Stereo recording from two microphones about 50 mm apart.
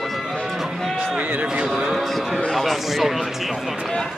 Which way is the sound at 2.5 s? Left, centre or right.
Centre.